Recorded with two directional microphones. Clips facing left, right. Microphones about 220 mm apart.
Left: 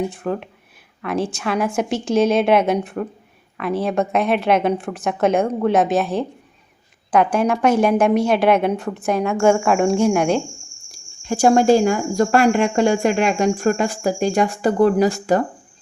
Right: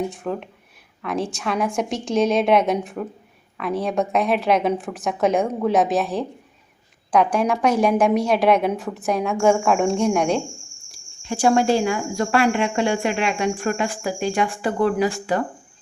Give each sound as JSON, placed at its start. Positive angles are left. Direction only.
{"t": 0.0, "sound": "a woman's voice", "side_deg": 0}
{"t": 10.9, "sound": "speech", "side_deg": 45}